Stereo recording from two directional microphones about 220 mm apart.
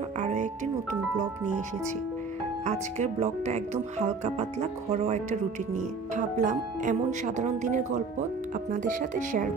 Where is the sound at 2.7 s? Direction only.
30° right (ahead or behind).